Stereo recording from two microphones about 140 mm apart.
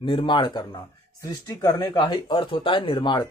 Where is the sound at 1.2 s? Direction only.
20° left (ahead or behind).